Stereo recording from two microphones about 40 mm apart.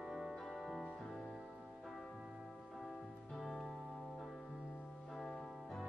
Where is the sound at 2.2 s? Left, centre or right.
Centre.